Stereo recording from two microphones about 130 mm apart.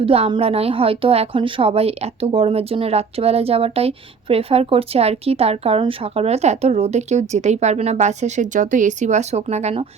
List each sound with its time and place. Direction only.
0.0 s a woman's voice: 45° right (ahead or behind)